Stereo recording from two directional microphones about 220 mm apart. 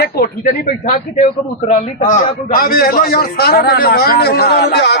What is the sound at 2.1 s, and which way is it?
A man's voice, 40° left (ahead or behind).